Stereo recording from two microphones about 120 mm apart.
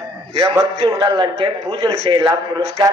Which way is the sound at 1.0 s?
40° right (ahead or behind).